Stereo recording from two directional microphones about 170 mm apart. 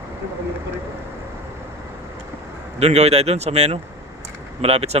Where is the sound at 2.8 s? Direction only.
40° right (ahead or behind).